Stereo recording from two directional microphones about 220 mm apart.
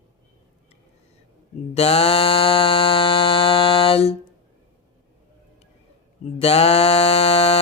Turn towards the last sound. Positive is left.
turn(degrees=25)  # may be behind; listen again after turning